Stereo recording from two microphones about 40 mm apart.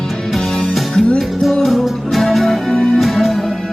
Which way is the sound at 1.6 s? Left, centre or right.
Centre.